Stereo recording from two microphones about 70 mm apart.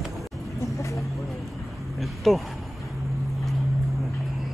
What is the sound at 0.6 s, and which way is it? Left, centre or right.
Vehicle, left.